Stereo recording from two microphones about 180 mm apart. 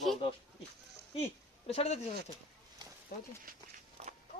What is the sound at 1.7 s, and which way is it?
Speech, 35° left (ahead or behind).